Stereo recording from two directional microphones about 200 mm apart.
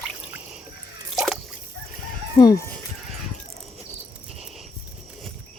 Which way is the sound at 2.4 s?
15° left (ahead or behind).